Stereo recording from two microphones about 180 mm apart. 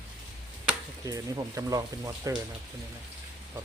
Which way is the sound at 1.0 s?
20° right (ahead or behind).